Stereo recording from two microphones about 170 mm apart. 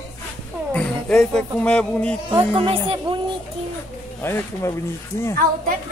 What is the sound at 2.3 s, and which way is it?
Speech, 30° right (ahead or behind).